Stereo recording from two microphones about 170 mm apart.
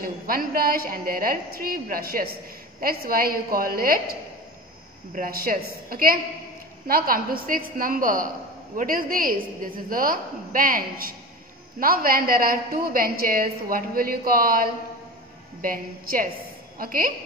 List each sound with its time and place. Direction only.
0.0 s a woman's voice: 55° right (ahead or behind)